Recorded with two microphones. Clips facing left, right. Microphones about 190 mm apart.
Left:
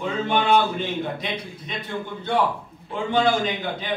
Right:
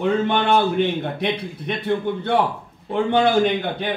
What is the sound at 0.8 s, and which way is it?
Speech, 60° right (ahead or behind).